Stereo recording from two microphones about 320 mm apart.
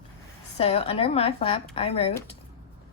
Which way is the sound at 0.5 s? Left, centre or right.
Centre.